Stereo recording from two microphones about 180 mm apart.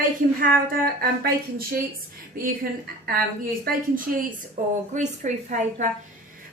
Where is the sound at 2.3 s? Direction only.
55° right (ahead or behind).